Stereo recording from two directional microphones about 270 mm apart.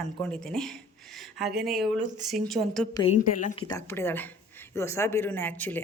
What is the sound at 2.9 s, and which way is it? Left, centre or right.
Speech, left.